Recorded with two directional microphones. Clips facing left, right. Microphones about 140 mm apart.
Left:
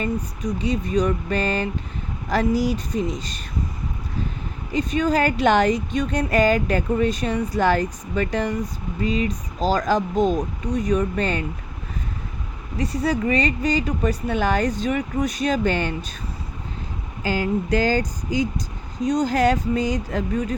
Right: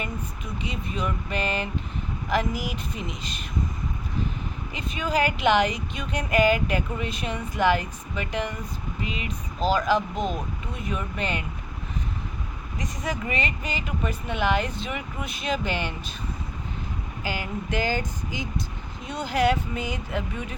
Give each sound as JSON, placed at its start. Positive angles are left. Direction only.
{"t": 0.0, "sound": "speech", "side_deg": 40}
{"t": 4.7, "sound": "speech", "side_deg": 40}
{"t": 12.7, "sound": "speech", "side_deg": 35}
{"t": 15.7, "sound": "speech", "side_deg": -15}
{"t": 18.3, "sound": "speech", "side_deg": 40}